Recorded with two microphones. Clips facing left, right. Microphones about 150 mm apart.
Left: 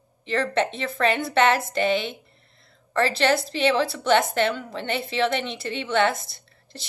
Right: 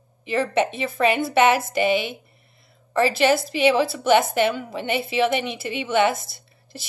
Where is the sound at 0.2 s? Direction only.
10° right (ahead or behind).